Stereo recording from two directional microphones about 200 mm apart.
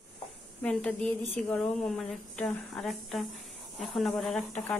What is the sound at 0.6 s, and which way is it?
A woman's voice, 5° left (ahead or behind).